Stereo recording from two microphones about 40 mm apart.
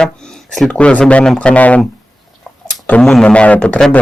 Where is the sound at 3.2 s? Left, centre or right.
Left.